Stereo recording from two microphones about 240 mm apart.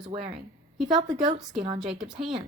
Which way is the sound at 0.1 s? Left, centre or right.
Right.